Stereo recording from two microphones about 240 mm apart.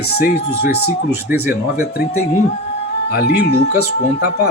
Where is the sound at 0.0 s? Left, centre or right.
Left.